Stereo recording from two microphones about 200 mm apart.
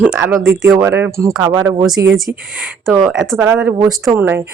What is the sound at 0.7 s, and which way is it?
Speech, 10° right (ahead or behind).